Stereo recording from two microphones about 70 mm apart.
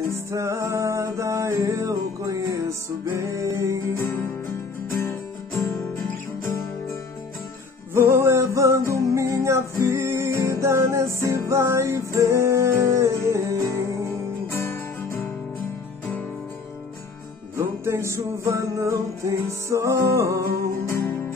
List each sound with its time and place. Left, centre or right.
0.3 s music: right
4.0 s music: left
7.9 s music: right
14.5 s music: left
17.6 s music: right